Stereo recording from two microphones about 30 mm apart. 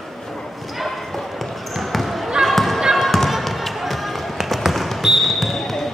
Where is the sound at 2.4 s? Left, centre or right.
Centre.